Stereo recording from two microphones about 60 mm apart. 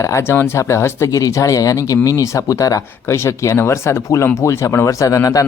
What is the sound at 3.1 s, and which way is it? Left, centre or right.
Speech, left.